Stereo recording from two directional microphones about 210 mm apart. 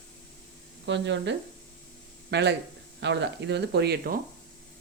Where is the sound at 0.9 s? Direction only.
60° right (ahead or behind).